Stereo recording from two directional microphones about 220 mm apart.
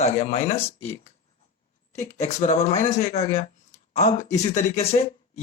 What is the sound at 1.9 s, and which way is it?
Speech, 30° left (ahead or behind).